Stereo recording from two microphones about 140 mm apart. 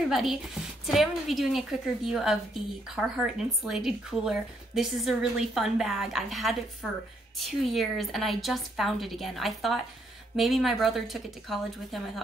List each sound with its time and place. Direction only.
0.1 s a woman's voice: centre (ahead or behind)